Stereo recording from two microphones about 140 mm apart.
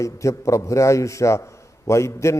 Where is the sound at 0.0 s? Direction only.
20° left (ahead or behind).